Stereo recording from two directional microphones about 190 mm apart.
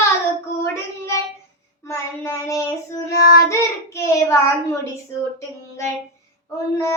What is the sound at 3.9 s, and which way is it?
Child singing, 15° left (ahead or behind).